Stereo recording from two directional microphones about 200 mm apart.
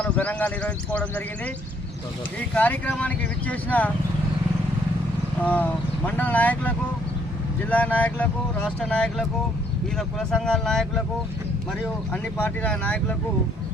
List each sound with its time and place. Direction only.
0.0 s speech: 5° left (ahead or behind)
2.6 s speech: 10° left (ahead or behind)
5.4 s speech: 10° left (ahead or behind)
12.1 s speech: 5° left (ahead or behind)